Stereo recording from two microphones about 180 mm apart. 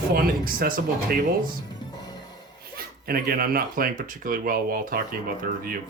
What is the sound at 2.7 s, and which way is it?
Speech, 55° right (ahead or behind).